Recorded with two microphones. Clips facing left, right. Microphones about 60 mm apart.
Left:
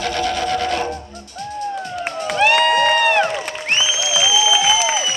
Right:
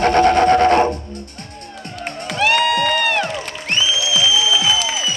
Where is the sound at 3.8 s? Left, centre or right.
Centre.